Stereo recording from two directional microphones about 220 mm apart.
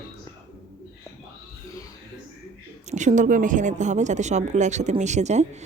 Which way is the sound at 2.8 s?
35° right (ahead or behind).